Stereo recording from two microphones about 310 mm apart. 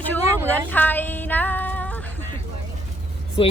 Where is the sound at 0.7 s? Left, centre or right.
Centre.